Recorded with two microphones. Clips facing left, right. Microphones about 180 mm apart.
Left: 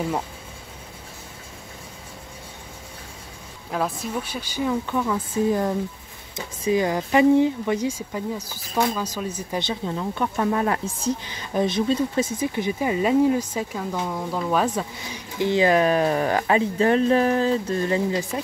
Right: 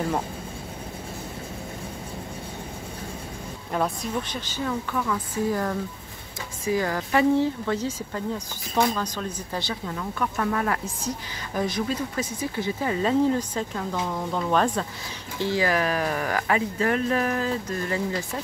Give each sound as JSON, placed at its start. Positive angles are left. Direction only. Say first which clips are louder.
{"t": 3.7, "sound": "a woman's voice", "louder": "even", "side_deg": 5}
{"t": 9.6, "sound": "a woman's voice", "louder": "left 5 dB", "side_deg": 20}
{"t": 15.3, "sound": "speech", "louder": "left 5 dB", "side_deg": 20}